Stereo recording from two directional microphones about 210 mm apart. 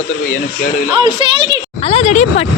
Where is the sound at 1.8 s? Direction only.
30° left (ahead or behind).